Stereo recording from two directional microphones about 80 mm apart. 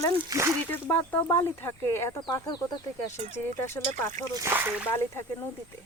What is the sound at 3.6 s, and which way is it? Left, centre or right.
Speech, left.